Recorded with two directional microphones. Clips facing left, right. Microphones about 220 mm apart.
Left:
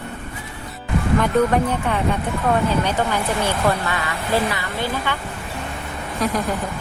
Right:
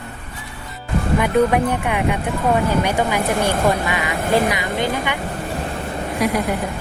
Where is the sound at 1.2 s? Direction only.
10° right (ahead or behind).